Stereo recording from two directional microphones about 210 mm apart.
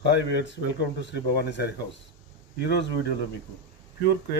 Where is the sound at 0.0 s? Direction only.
55° left (ahead or behind).